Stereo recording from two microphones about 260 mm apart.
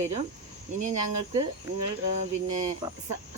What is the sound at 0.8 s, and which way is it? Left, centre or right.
Speech, right.